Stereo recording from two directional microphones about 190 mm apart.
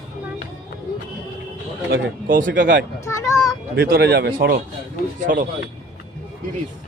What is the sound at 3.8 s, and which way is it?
Speech, 55° right (ahead or behind).